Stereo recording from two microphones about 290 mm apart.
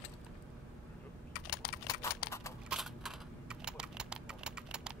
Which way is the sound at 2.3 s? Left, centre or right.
Centre.